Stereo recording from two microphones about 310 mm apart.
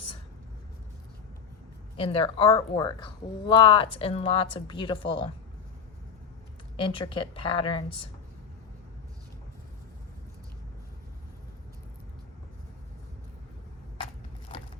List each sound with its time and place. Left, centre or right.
2.0 s speech: centre
6.8 s speech: centre